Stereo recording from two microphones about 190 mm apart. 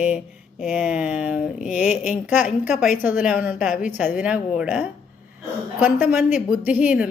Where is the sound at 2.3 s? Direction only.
5° right (ahead or behind).